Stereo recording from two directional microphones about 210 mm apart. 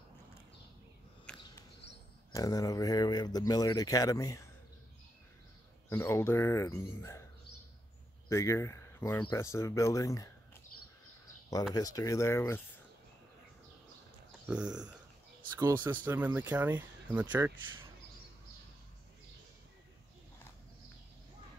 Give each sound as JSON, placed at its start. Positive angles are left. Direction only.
{"t": 1.3, "sound": "a sound", "side_deg": 5}
{"t": 2.3, "sound": "speech", "side_deg": 15}
{"t": 5.9, "sound": "speech", "side_deg": 10}
{"t": 8.3, "sound": "speech", "side_deg": 15}
{"t": 11.7, "sound": "speech", "side_deg": 15}
{"t": 14.4, "sound": "speech", "side_deg": -5}
{"t": 15.5, "sound": "speech", "side_deg": -15}